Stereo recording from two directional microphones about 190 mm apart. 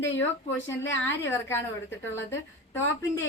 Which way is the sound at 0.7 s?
15° left (ahead or behind).